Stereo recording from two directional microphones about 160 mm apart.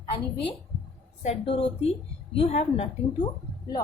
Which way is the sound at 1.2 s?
40° left (ahead or behind).